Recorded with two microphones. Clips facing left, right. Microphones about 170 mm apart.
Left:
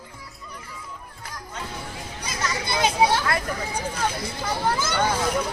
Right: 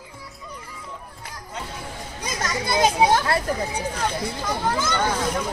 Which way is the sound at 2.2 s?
45° right (ahead or behind).